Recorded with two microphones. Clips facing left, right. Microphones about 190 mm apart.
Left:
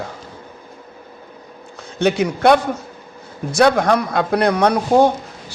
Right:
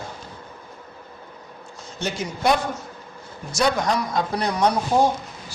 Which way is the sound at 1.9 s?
65° left (ahead or behind).